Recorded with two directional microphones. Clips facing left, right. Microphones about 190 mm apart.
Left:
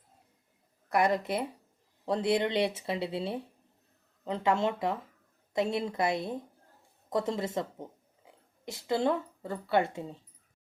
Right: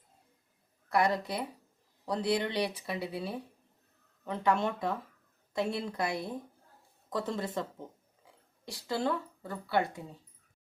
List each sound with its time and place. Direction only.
0.9 s speech: 20° left (ahead or behind)